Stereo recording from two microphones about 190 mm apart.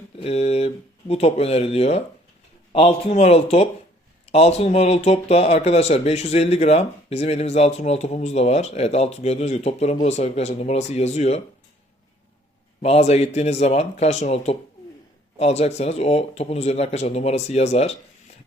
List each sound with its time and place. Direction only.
0.2 s speech: 35° left (ahead or behind)
12.8 s speech: 35° left (ahead or behind)